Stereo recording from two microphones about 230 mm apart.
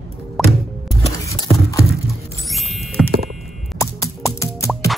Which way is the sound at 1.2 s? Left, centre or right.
Centre.